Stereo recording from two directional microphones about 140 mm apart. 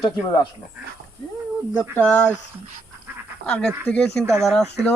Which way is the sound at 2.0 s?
15° left (ahead or behind).